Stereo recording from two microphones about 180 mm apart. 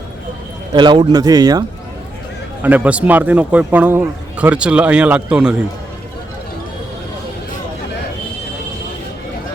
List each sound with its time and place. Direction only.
0.7 s a man's voice: 25° right (ahead or behind)
2.6 s speech: 10° right (ahead or behind)